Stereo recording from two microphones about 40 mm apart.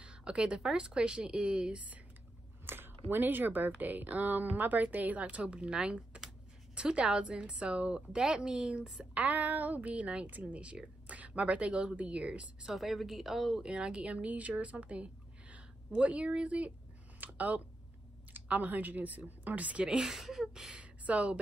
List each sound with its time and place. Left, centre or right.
0.0 s a sound: right
0.6 s a woman's voice: centre
2.6 s a woman's voice: right
5.2 s a woman's voice: right
9.1 s a woman's voice: right
12.7 s a woman's voice: centre
13.6 s speech: right
17.2 s a woman's voice: right
20.0 s speech: centre
20.7 s speech: right